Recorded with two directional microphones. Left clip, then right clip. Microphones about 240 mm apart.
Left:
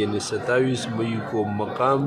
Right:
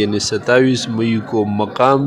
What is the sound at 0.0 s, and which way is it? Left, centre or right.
Speech, right.